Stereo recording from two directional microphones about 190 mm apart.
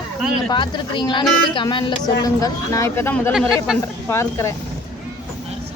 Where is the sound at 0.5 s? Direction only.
25° left (ahead or behind).